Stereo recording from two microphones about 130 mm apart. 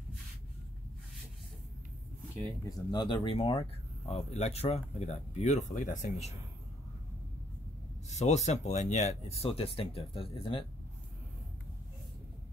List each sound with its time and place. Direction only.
2.9 s speech: 35° left (ahead or behind)
4.1 s speech: 55° left (ahead or behind); by 6.3 s 70° left (ahead or behind)
8.1 s speech: 60° left (ahead or behind); by 10.7 s 45° left (ahead or behind)